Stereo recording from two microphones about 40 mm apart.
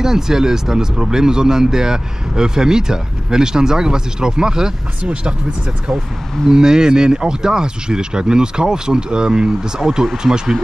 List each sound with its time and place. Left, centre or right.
0.0 s speech: centre
6.5 s speech: centre